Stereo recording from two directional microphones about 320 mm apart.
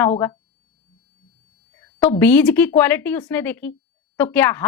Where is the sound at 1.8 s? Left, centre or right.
Centre.